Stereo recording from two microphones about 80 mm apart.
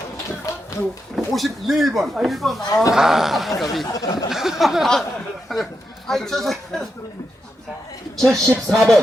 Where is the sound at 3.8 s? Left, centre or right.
Left.